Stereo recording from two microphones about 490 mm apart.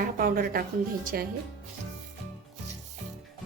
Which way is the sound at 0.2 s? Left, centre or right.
Centre.